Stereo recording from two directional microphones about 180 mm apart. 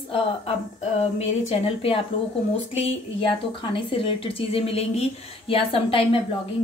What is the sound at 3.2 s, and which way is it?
A woman's voice, 30° left (ahead or behind).